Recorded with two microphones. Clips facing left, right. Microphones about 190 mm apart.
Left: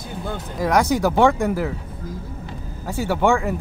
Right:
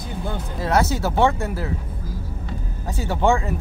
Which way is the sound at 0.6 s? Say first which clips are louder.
Left 3 dB; 15° left (ahead or behind).